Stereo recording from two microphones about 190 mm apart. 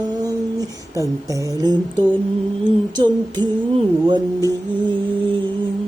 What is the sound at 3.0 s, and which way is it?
Music, 25° right (ahead or behind).